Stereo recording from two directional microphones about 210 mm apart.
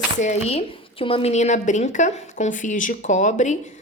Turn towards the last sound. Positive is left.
turn(degrees=35)  # may be behind; listen again after turning